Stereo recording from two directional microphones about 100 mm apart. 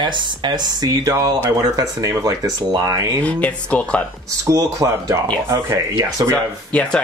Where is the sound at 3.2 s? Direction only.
15° left (ahead or behind).